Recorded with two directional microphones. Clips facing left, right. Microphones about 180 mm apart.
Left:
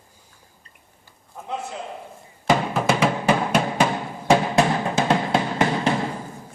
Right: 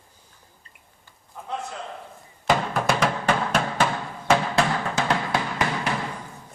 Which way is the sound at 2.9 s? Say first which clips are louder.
Left 3 dB; 5° left (ahead or behind).